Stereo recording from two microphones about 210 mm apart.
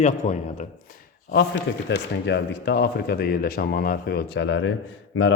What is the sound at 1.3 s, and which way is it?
Speech, 50° left (ahead or behind).